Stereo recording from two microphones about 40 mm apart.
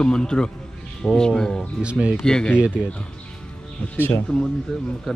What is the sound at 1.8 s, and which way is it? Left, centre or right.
Speech, right.